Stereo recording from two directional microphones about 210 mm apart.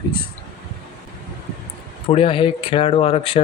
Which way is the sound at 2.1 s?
25° left (ahead or behind).